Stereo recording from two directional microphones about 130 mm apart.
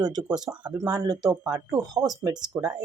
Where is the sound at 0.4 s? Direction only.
35° right (ahead or behind).